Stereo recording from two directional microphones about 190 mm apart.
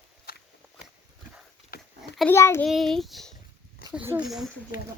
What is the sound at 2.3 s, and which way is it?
Speech, 15° left (ahead or behind).